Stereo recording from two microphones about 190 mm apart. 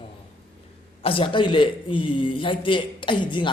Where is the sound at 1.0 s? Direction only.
30° left (ahead or behind).